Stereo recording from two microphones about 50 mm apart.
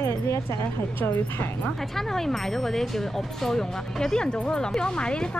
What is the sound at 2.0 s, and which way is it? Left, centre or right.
Speech, centre.